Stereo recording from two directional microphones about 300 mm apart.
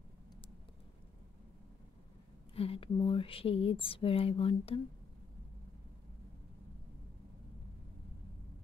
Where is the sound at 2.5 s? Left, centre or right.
Centre.